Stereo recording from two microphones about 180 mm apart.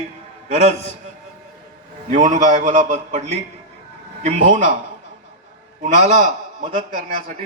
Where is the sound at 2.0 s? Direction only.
45° right (ahead or behind).